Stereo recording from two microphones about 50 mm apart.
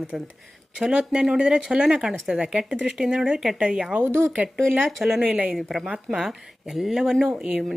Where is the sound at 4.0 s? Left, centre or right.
Right.